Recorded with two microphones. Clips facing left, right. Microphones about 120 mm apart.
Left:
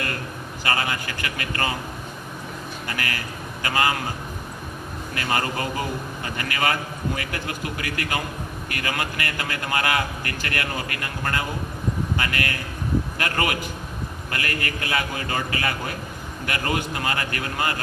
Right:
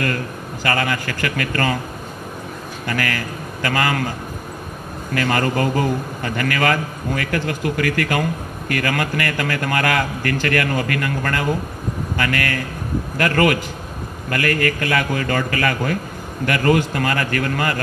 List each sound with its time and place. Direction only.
0.7 s a man's voice: 55° right (ahead or behind)
2.9 s a man's voice: 50° right (ahead or behind)
5.1 s a man's voice: 50° right (ahead or behind)